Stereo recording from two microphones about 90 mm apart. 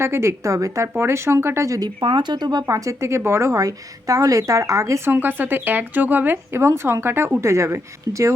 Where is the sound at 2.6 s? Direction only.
35° right (ahead or behind).